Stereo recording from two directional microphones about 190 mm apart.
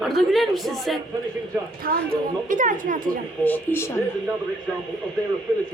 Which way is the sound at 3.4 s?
10° left (ahead or behind).